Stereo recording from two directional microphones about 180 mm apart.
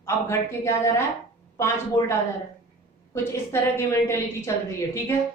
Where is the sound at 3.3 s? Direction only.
15° left (ahead or behind).